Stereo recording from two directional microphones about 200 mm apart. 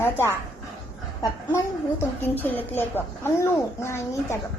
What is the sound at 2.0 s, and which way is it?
A woman's voice, 10° left (ahead or behind).